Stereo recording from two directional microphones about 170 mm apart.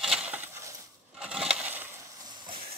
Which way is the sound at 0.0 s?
5° right (ahead or behind).